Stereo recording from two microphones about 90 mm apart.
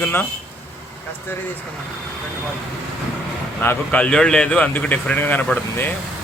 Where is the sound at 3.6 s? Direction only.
20° left (ahead or behind).